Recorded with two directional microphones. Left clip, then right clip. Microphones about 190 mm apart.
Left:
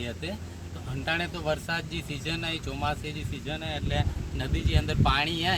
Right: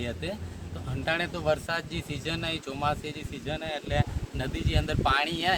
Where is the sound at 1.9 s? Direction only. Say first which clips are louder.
Even; 50° right (ahead or behind).